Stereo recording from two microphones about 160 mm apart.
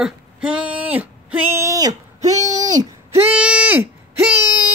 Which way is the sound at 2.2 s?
20° right (ahead or behind).